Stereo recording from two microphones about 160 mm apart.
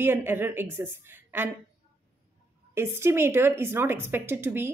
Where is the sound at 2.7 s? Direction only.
15° right (ahead or behind).